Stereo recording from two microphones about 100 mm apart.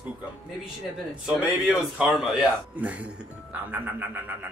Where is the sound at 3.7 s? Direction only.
20° right (ahead or behind).